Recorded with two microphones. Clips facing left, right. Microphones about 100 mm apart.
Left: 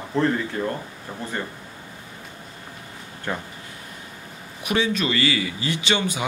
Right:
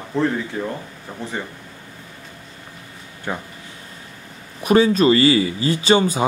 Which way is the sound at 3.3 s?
10° right (ahead or behind).